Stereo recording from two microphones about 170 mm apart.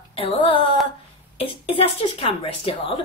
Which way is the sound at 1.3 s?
35° left (ahead or behind).